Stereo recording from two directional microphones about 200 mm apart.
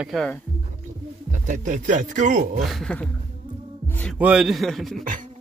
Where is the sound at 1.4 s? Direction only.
40° right (ahead or behind).